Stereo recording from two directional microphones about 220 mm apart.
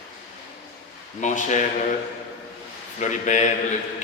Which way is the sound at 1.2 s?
35° left (ahead or behind).